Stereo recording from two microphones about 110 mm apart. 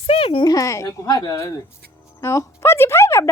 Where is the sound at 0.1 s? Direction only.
55° left (ahead or behind).